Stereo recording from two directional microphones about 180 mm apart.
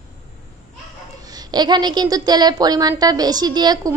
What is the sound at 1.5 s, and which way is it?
A woman's voice, 25° right (ahead or behind).